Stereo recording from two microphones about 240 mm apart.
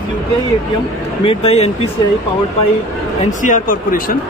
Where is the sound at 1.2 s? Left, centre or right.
Left.